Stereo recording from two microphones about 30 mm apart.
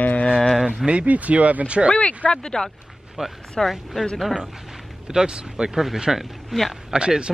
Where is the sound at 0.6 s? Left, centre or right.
Centre.